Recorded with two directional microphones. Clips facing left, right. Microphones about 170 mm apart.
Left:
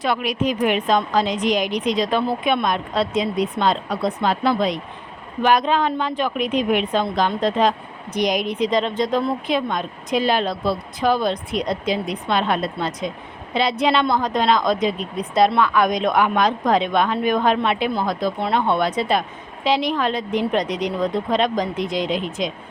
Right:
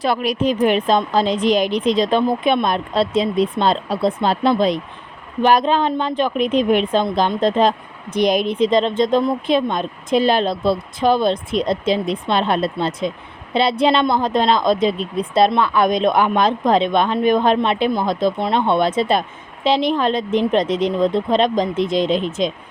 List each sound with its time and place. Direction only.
0.0 s a woman's voice: 35° right (ahead or behind)